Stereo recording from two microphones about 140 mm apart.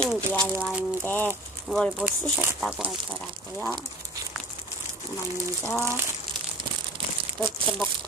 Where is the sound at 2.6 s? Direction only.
Centre (ahead or behind).